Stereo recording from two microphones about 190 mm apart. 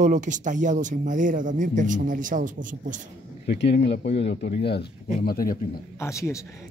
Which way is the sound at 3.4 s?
60° left (ahead or behind).